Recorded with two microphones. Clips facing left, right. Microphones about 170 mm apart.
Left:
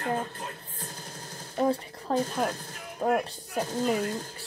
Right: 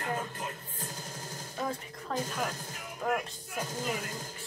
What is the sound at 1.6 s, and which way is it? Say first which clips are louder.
A woman's voice: left 10 dB; 35° left (ahead or behind).